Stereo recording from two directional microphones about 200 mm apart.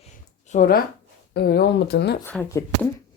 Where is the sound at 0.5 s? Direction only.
45° left (ahead or behind).